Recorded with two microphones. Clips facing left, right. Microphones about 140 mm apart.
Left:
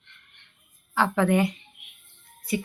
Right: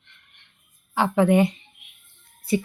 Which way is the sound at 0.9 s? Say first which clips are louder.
Right 3 dB; 15° right (ahead or behind).